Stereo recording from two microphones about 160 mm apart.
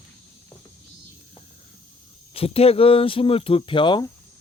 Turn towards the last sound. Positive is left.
turn(degrees=25)  # may be behind; listen again after turning